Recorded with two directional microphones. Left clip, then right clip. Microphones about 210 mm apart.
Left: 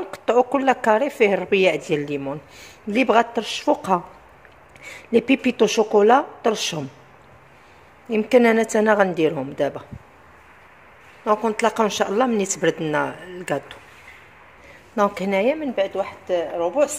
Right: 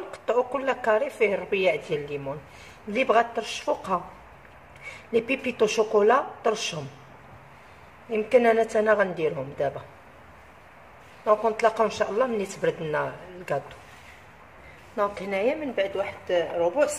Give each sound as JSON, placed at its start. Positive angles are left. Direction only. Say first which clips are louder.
{"t": 0.1, "sound": "a woman's voice", "louder": "left 7 dB", "side_deg": 45}
{"t": 8.1, "sound": "a woman's voice", "louder": "left 4 dB", "side_deg": 50}
{"t": 11.2, "sound": "a woman's voice", "louder": "left 2 dB", "side_deg": 45}
{"t": 15.0, "sound": "a woman's voice", "louder": "left 6 dB", "side_deg": 45}
{"t": 15.7, "sound": "speech", "louder": "left 4 dB", "side_deg": 30}